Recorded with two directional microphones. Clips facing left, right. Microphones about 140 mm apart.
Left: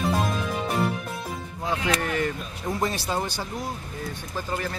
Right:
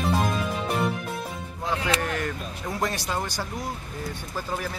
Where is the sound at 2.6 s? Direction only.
25° left (ahead or behind).